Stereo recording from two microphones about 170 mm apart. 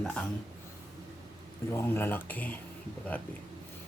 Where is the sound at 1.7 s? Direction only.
15° left (ahead or behind).